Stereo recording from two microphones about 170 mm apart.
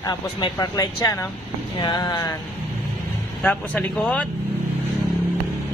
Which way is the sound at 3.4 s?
10° left (ahead or behind).